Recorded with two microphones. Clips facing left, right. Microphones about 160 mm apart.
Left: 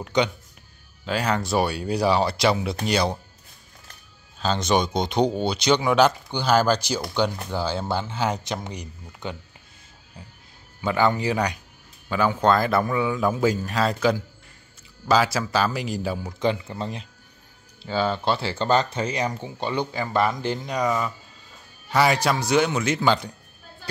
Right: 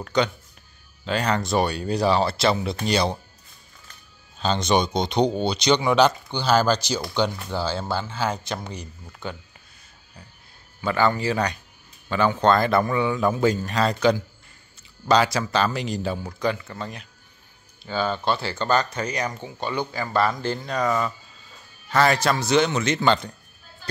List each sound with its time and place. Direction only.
0.0 s speech: 15° left (ahead or behind)
1.0 s speech: 5° left (ahead or behind)
4.4 s speech: 5° left (ahead or behind); by 9.4 s 20° left (ahead or behind)
10.8 s speech: 15° left (ahead or behind)
16.2 s speech: 20° left (ahead or behind)